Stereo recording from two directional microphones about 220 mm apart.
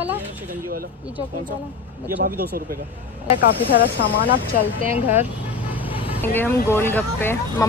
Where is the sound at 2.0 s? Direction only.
40° right (ahead or behind).